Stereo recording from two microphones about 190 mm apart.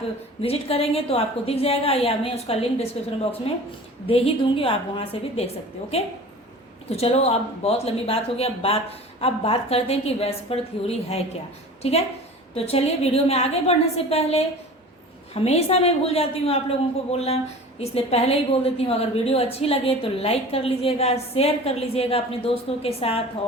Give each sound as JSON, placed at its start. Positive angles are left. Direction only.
{"t": 0.4, "sound": "a woman's voice", "side_deg": 30}
{"t": 4.0, "sound": "a woman's voice", "side_deg": 30}
{"t": 6.9, "sound": "a woman's voice", "side_deg": 35}